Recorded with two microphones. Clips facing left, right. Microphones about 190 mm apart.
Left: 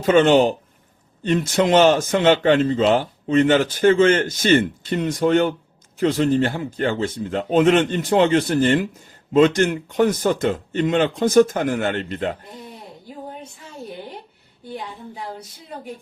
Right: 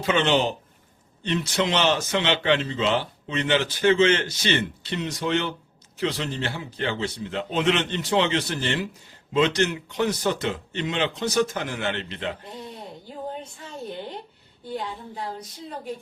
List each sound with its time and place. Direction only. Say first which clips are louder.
0.0 s a man's voice: left 8 dB; 45° left (ahead or behind)